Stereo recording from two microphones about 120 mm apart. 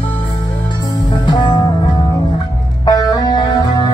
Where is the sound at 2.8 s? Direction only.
30° left (ahead or behind).